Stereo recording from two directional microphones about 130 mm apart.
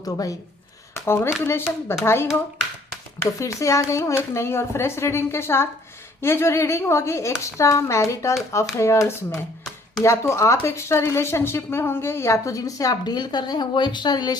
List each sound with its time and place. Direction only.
0.0 s speech: 25° left (ahead or behind)
3.4 s speech: 25° left (ahead or behind)